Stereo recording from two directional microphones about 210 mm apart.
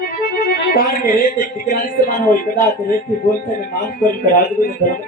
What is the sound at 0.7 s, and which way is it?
Speech, 45° left (ahead or behind).